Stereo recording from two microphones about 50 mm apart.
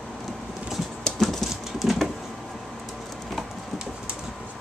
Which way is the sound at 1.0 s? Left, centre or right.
Centre.